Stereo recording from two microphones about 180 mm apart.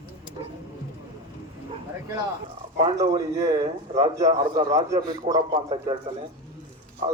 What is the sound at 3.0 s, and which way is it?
A man's voice, 20° right (ahead or behind).